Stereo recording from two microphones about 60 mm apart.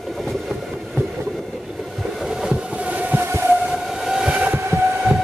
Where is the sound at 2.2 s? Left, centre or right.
Centre.